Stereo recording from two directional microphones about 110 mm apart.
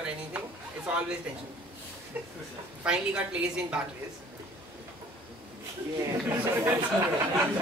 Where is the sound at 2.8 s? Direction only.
10° right (ahead or behind).